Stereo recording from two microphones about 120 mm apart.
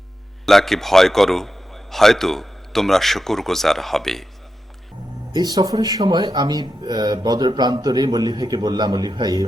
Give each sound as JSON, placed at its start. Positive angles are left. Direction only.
{"t": 0.4, "sound": "a man's voice", "side_deg": 5}
{"t": 5.3, "sound": "speech", "side_deg": -35}